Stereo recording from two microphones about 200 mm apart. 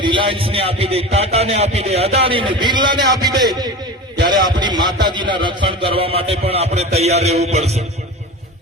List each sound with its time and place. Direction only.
0.0 s a man's voice: 25° right (ahead or behind)